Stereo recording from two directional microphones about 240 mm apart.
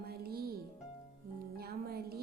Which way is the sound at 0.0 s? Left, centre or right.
Right.